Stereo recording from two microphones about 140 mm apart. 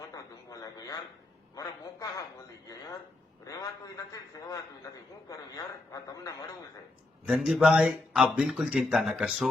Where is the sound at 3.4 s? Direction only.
25° left (ahead or behind).